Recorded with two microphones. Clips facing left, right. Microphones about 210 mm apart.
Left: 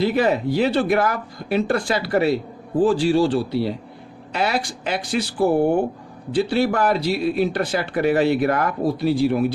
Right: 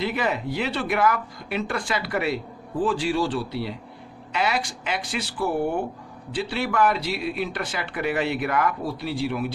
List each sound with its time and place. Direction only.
0.0 s speech: 35° left (ahead or behind)